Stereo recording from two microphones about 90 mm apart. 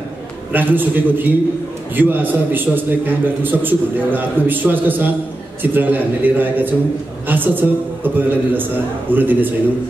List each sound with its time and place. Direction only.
0.5 s a man's voice: 20° right (ahead or behind)